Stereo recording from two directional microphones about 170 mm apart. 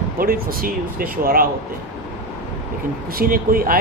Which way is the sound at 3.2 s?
60° right (ahead or behind).